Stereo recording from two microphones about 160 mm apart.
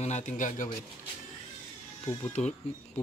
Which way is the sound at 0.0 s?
45° left (ahead or behind).